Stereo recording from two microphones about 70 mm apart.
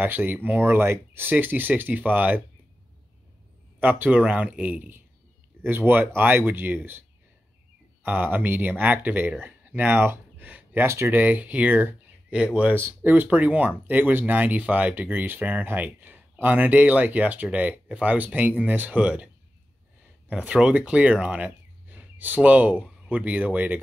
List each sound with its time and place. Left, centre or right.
0.0 s speech: right
3.8 s speech: right
10.9 s speech: right
11.1 s speech: right
12.7 s speech: right